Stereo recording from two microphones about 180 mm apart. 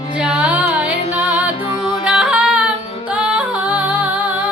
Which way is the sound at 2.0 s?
5° right (ahead or behind).